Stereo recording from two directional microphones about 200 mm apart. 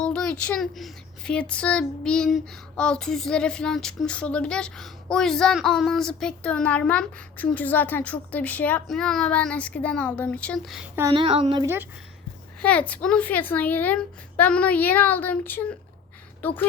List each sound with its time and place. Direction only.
0.0 s speech: 5° left (ahead or behind)
11.1 s a woman's voice: 25° right (ahead or behind)
11.6 s a woman's voice: 10° right (ahead or behind)
12.6 s a woman's voice: 5° left (ahead or behind)